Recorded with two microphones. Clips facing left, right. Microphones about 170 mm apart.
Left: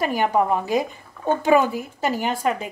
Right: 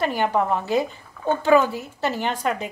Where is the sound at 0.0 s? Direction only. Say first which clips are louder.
Left 1 dB; 10° left (ahead or behind).